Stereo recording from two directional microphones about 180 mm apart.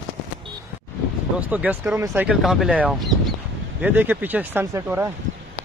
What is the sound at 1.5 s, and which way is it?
Speech, 10° right (ahead or behind).